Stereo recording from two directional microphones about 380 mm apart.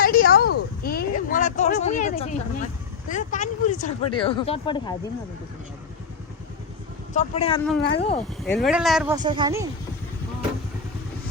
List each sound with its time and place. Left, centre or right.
0.0 s a sound: left
3.1 s speech: centre
7.1 s speech: centre
8.4 s speech: centre